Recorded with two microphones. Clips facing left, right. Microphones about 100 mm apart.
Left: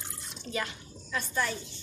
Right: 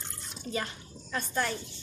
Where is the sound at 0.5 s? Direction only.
40° right (ahead or behind).